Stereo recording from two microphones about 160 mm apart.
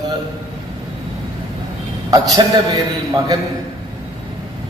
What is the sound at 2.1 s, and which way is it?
Speech, 25° right (ahead or behind).